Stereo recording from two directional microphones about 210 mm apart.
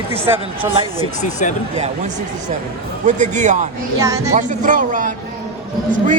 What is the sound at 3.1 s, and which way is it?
Speech, 35° right (ahead or behind).